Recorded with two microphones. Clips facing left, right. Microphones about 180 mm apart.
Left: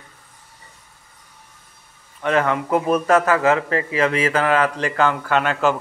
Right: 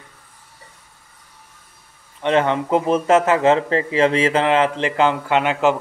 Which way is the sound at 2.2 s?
25° right (ahead or behind).